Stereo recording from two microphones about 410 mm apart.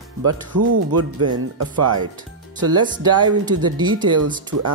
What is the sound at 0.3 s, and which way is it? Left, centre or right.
Speech, right.